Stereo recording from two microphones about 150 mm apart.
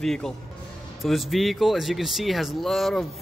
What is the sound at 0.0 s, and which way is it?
Speech, 5° left (ahead or behind).